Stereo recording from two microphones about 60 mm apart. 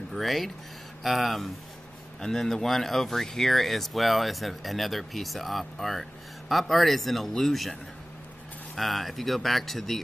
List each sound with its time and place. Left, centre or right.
0.1 s speech: centre
8.7 s speech: centre